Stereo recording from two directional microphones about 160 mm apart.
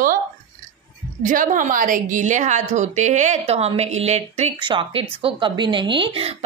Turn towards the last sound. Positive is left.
turn(degrees=-35)  # may be behind; listen again after turning